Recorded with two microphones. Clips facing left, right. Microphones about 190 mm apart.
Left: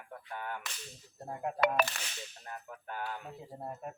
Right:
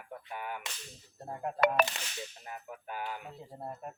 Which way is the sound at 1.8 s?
50° right (ahead or behind).